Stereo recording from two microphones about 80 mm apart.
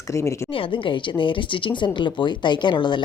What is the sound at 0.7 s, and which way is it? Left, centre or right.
Speech, left.